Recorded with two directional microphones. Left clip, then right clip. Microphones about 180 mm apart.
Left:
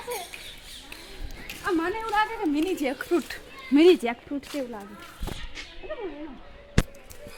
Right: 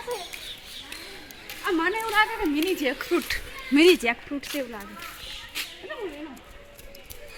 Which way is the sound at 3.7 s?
30° left (ahead or behind).